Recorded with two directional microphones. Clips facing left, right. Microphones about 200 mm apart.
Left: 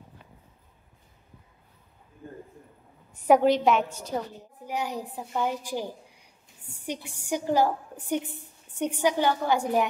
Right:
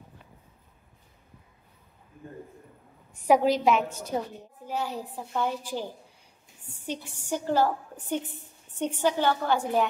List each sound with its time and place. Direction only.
3.3 s a woman's voice: centre (ahead or behind)
4.1 s a woman's voice: 15° right (ahead or behind)
4.6 s a woman's voice: 15° left (ahead or behind)
6.9 s a woman's voice: 15° left (ahead or behind)